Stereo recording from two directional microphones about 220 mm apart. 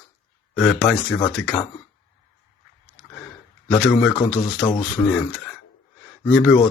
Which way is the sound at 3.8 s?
Centre (ahead or behind).